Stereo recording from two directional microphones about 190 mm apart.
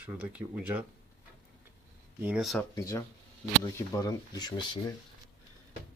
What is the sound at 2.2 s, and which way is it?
Speech, centre (ahead or behind).